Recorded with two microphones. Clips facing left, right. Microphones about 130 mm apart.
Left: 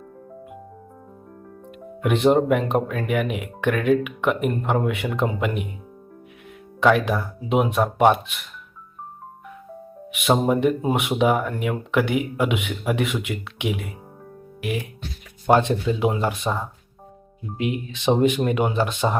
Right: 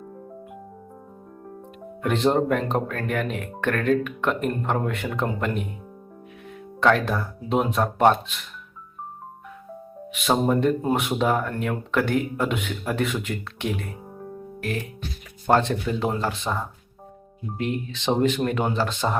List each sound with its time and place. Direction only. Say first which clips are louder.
2.0 s speech: left 3 dB; 10° left (ahead or behind)
6.7 s speech: left 2 dB; 5° left (ahead or behind)
10.2 s speech: left 2 dB; 5° left (ahead or behind)
14.6 s music: left 2 dB; 10° left (ahead or behind)
15.4 s speech: left 3 dB; 15° left (ahead or behind)